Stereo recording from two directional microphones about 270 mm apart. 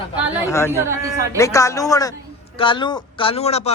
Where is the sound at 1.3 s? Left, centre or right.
Centre.